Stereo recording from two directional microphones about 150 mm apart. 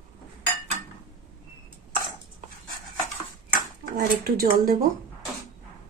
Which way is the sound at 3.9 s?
75° right (ahead or behind).